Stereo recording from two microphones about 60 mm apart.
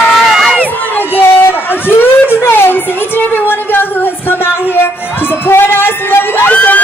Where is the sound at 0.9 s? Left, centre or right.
Left.